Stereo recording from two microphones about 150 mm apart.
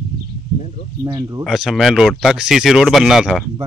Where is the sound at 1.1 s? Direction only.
20° right (ahead or behind).